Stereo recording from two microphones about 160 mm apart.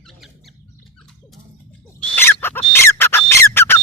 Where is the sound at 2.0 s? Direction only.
10° left (ahead or behind).